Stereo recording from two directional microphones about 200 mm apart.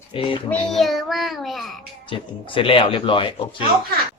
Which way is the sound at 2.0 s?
25° left (ahead or behind).